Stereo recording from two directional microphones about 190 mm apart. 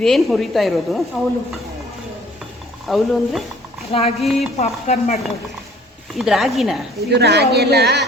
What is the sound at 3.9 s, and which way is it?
Speech, 30° left (ahead or behind).